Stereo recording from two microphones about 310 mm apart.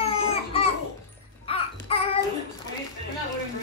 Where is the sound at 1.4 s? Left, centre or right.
Centre.